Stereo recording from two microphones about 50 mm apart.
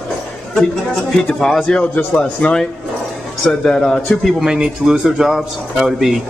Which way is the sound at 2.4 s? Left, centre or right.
Left.